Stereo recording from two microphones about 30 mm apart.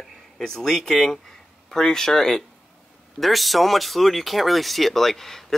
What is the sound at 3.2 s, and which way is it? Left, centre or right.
Speech, centre.